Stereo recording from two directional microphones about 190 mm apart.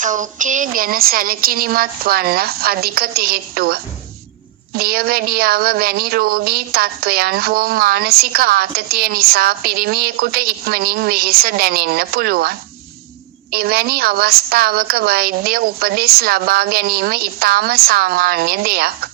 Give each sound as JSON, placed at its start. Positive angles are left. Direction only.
{"t": 0.0, "sound": "a woman's voice", "side_deg": -40}